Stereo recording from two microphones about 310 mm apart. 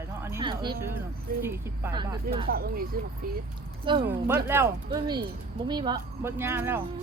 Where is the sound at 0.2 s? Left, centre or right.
Centre.